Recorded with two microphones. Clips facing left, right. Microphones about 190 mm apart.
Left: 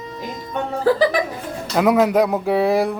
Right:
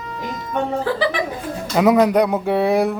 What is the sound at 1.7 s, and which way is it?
Speech, centre (ahead or behind).